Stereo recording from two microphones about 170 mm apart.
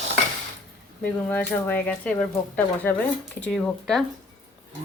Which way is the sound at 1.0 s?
10° left (ahead or behind).